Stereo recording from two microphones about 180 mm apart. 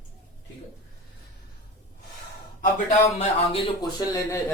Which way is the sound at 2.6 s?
45° left (ahead or behind).